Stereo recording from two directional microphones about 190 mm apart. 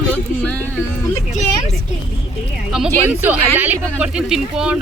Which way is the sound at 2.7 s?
5° right (ahead or behind).